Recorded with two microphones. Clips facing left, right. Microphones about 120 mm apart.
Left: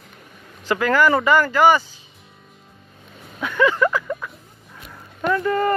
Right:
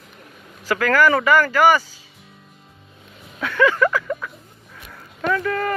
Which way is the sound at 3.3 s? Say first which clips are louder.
Right 1 dB; 15° left (ahead or behind).